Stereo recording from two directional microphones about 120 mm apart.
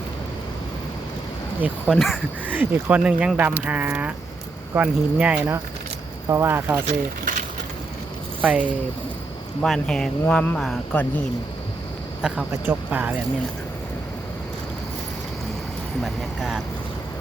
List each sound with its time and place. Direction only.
1.6 s speech: centre (ahead or behind)
2.5 s speech: 20° right (ahead or behind)
6.2 s speech: 25° right (ahead or behind)
8.4 s speech: 10° right (ahead or behind)
9.6 s speech: 5° left (ahead or behind)
12.2 s speech: 5° right (ahead or behind)
16.0 s speech: 5° right (ahead or behind)